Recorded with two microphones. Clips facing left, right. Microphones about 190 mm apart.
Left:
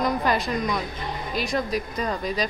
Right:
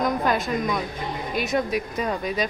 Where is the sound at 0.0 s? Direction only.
Centre (ahead or behind).